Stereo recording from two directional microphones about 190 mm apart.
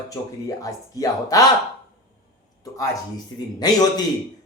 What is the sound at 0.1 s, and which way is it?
Speech, 20° left (ahead or behind).